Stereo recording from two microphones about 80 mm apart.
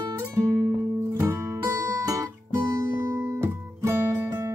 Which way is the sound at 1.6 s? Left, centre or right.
Right.